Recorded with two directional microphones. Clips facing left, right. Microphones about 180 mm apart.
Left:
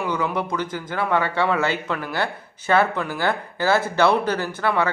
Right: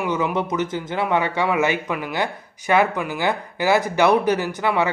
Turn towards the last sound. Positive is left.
turn(degrees=-15)  # may be behind; listen again after turning